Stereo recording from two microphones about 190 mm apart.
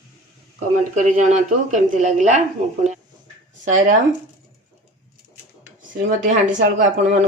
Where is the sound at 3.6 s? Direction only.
40° right (ahead or behind).